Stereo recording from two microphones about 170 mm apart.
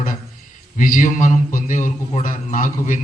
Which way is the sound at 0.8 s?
50° left (ahead or behind).